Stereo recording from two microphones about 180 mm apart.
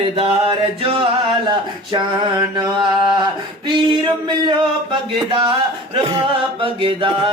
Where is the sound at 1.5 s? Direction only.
25° right (ahead or behind).